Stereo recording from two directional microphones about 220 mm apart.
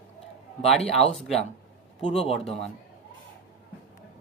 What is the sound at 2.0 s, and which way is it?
Speech, 30° left (ahead or behind).